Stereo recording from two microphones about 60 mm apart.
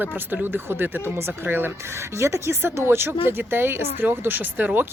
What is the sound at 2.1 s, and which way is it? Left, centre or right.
Speech, right.